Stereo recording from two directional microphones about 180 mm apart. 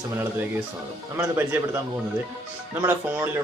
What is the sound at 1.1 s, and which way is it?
Speech, 15° right (ahead or behind).